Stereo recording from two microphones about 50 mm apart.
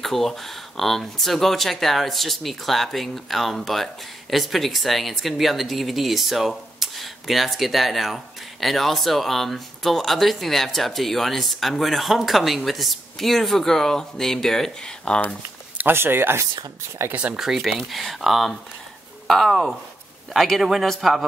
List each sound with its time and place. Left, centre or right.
0.0 s speech: centre
15.1 s speech: centre
15.9 s speech: right
17.1 s speech: right
17.4 s speech: centre